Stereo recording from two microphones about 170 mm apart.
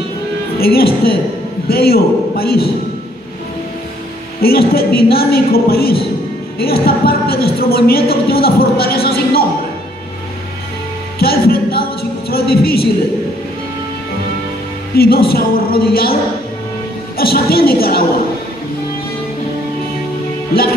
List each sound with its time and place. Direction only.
0.6 s speech: 65° left (ahead or behind)
4.4 s speech: 65° left (ahead or behind)
11.1 s singing: 65° left (ahead or behind)
15.0 s speech: 65° left (ahead or behind)
17.2 s speech: 65° left (ahead or behind)